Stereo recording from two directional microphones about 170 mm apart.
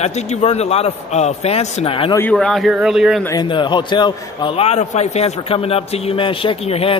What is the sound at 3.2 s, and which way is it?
A man's voice, 25° left (ahead or behind).